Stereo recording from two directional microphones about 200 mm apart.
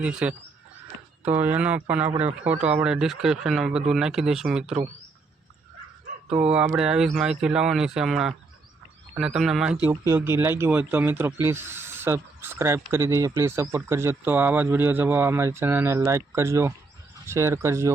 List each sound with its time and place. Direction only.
0.0 s speech: 5° right (ahead or behind)
2.0 s a man's voice: 30° right (ahead or behind)
2.6 s speech: 5° right (ahead or behind)
6.4 s speech: 5° right (ahead or behind)
9.8 s speech: 15° right (ahead or behind)